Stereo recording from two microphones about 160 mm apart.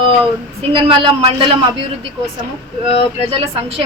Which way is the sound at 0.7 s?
35° right (ahead or behind).